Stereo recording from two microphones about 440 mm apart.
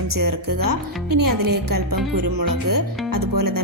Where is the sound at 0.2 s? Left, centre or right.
Right.